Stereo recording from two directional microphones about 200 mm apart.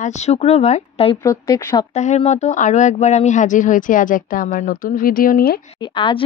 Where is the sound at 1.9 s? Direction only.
35° left (ahead or behind).